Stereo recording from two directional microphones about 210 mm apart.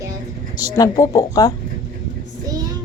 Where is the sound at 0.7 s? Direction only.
15° left (ahead or behind).